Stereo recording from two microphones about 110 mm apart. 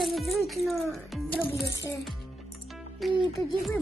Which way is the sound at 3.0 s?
Centre (ahead or behind).